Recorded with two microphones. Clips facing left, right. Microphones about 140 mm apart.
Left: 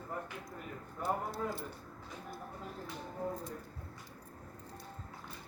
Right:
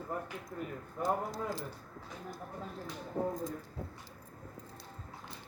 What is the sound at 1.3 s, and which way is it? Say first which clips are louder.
Speech: even; 90° right.